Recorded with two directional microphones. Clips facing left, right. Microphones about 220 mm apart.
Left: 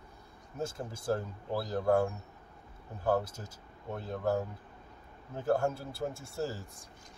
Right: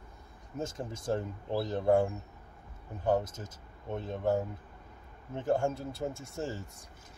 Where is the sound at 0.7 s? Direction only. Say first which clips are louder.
Right 1 dB; 20° right (ahead or behind).